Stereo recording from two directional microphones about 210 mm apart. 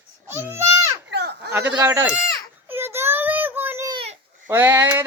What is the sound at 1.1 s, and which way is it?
Goat, 55° right (ahead or behind).